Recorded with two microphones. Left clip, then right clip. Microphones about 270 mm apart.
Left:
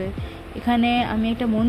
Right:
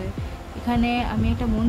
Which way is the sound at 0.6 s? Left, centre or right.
Centre.